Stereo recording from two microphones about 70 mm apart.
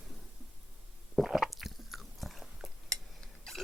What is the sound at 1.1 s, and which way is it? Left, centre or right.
Biting, centre.